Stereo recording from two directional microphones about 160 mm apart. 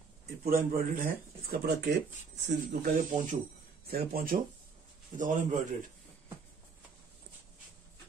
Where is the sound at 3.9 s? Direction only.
65° right (ahead or behind).